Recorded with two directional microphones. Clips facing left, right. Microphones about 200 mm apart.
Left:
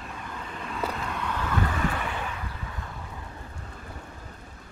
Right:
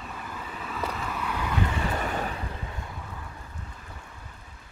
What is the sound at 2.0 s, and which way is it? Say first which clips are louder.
Vehicle: right 3 dB; 40° right (ahead or behind).